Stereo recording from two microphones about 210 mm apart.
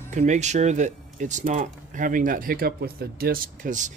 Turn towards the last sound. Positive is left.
turn(degrees=-40)  # may be behind; listen again after turning